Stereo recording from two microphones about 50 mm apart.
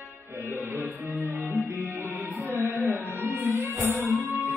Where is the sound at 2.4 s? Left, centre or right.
Right.